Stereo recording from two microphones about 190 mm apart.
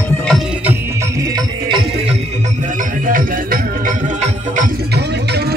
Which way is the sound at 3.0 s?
45° right (ahead or behind).